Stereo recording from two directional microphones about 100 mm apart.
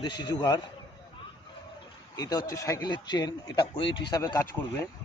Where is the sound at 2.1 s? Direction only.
40° left (ahead or behind).